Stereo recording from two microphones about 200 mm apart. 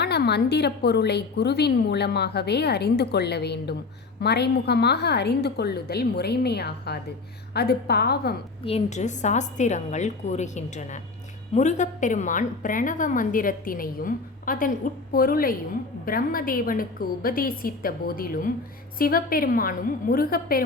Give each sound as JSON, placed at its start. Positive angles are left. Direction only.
{"t": 0.0, "sound": "a woman's voice", "side_deg": 55}
{"t": 8.6, "sound": "a woman's voice", "side_deg": 35}